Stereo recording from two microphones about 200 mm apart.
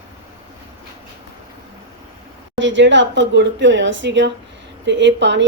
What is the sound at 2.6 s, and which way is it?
Speech, 65° right (ahead or behind).